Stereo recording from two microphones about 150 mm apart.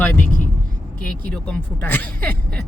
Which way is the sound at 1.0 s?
5° left (ahead or behind).